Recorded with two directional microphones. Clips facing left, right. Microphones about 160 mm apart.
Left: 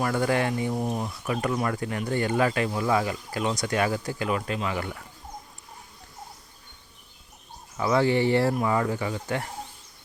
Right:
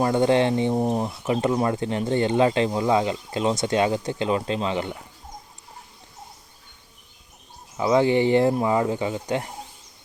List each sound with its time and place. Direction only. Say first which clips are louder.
0.0 s speech: right 5 dB; 25° right (ahead or behind)
7.8 s speech: right 3 dB; 20° right (ahead or behind)